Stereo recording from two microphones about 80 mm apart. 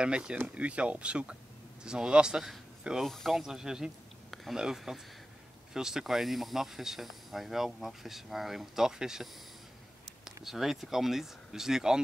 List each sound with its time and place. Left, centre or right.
0.0 s speech: centre